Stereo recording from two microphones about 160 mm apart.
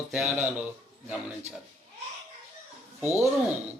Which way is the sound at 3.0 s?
20° left (ahead or behind).